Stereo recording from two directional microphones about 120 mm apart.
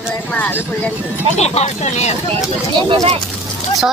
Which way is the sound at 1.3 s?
65° left (ahead or behind).